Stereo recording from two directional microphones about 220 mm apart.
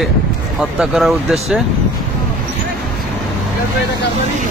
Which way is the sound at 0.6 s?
Centre (ahead or behind).